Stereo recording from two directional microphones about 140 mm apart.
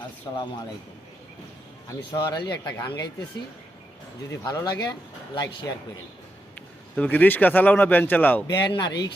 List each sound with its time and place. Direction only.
0.3 s speech: 30° left (ahead or behind)
2.0 s speech: 35° left (ahead or behind)
4.3 s speech: 25° left (ahead or behind)
6.9 s speech: 10° left (ahead or behind)
8.4 s speech: 30° left (ahead or behind)